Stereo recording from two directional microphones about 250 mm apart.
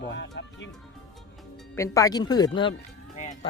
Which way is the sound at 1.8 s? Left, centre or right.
Centre.